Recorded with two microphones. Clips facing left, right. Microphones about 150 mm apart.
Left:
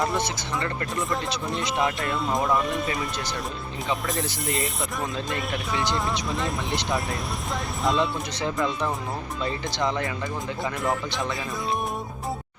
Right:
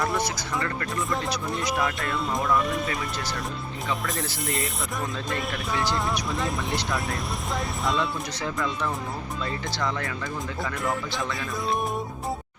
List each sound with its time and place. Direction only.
0.6 s speech: 25° left (ahead or behind)
2.1 s speech: centre (ahead or behind)
4.2 s speech: 20° left (ahead or behind)
5.3 s speech: centre (ahead or behind)
8.4 s speech: 20° left (ahead or behind)